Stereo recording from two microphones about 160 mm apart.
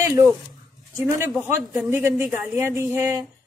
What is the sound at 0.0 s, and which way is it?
A woman's voice, 20° right (ahead or behind).